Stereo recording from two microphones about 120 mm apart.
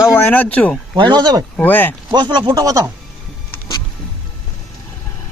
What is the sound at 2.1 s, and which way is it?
Speech, 40° right (ahead or behind).